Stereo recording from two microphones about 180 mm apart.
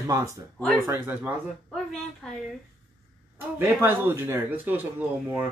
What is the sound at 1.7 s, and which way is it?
Speech, centre (ahead or behind).